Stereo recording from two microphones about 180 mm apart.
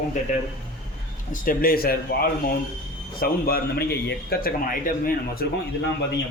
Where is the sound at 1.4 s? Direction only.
55° left (ahead or behind).